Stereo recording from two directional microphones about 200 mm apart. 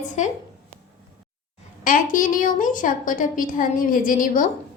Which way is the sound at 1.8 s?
40° left (ahead or behind).